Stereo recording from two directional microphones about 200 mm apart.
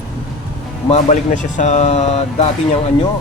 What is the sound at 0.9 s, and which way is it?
A man's voice, 35° left (ahead or behind).